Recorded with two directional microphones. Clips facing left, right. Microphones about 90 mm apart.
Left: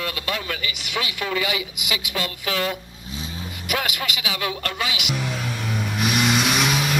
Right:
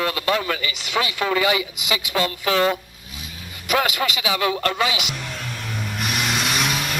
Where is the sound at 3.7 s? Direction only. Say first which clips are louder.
Right 5 dB; 35° right (ahead or behind).